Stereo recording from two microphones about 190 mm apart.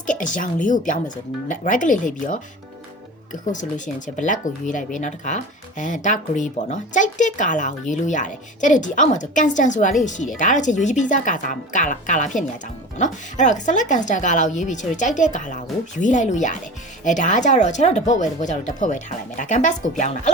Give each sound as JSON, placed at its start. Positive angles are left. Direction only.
{"t": 0.0, "sound": "speech", "side_deg": 45}
{"t": 3.4, "sound": "speech", "side_deg": 40}